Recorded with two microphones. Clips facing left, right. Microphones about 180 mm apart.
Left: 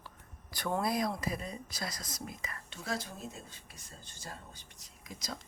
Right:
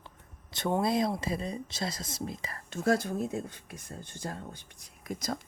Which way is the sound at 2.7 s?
50° right (ahead or behind).